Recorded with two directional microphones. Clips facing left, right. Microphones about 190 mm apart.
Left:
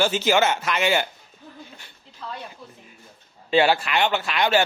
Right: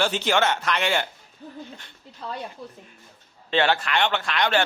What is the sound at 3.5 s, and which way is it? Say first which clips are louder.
Speech: left 3 dB; 10° left (ahead or behind).